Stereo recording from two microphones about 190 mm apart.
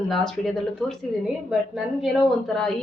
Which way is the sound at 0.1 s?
Centre (ahead or behind).